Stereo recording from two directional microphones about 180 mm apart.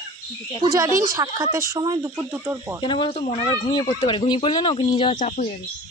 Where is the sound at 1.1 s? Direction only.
20° right (ahead or behind).